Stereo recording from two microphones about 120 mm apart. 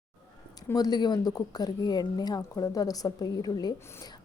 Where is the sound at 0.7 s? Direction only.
35° left (ahead or behind).